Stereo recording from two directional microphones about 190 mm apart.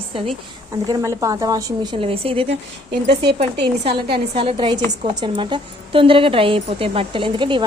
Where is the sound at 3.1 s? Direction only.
60° right (ahead or behind).